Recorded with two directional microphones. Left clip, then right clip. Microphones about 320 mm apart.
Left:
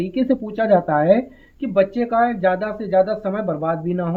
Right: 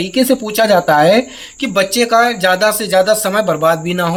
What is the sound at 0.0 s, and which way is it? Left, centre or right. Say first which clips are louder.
Speech: right 7 dB; centre.